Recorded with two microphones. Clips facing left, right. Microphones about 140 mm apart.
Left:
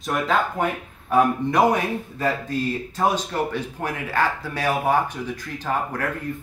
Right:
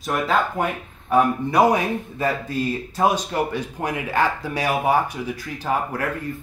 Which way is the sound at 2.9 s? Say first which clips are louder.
Right 2 dB; 10° right (ahead or behind).